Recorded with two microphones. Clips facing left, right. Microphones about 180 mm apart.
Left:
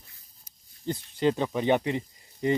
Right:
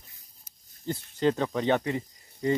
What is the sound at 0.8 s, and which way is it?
Speech, 15° left (ahead or behind).